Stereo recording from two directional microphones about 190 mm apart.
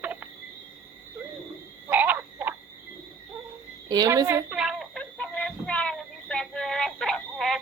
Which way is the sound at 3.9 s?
20° right (ahead or behind).